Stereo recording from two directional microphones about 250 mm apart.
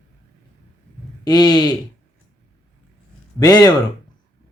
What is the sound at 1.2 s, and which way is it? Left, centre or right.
Speech, centre.